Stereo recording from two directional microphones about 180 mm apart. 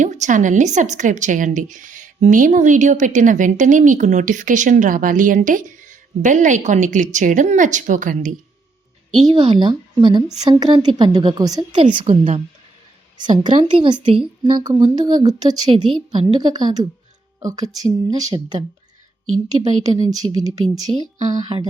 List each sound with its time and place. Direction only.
0.0 s a woman's voice: 40° right (ahead or behind)
9.2 s a woman's voice: 25° right (ahead or behind)
11.8 s a woman's voice: 35° right (ahead or behind)
13.6 s a woman's voice: 30° right (ahead or behind)